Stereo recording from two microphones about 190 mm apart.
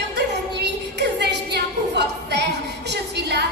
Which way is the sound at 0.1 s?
65° right (ahead or behind).